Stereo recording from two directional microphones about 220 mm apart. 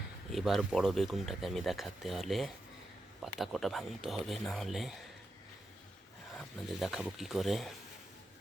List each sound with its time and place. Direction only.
0.3 s speech: centre (ahead or behind)
6.3 s speech: centre (ahead or behind)